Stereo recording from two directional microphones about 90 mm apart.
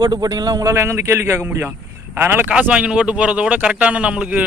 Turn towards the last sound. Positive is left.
turn(degrees=-15)  # may be behind; listen again after turning